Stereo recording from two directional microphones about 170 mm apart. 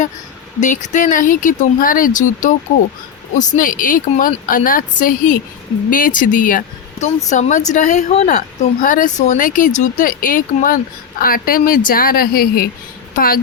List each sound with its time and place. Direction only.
0.6 s a woman's voice: 45° left (ahead or behind)